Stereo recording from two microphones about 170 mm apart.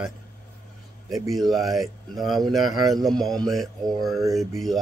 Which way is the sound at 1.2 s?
Centre (ahead or behind).